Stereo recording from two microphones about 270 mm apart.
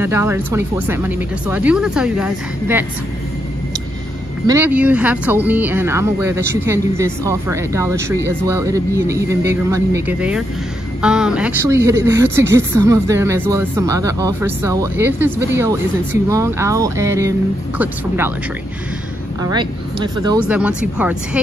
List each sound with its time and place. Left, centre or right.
0.0 s speech: centre
4.5 s speech: centre
19.4 s speech: centre
20.4 s speech: centre